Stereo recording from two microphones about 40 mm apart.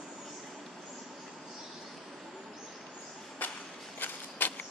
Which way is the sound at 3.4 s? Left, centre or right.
Left.